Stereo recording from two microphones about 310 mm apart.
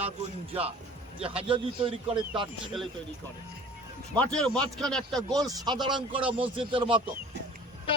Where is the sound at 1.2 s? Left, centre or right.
Centre.